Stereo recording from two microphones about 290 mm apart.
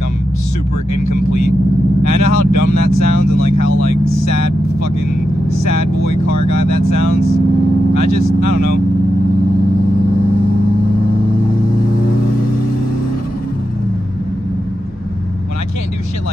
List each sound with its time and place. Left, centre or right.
1.0 s speech: left
5.7 s speech: left
8.4 s speech: left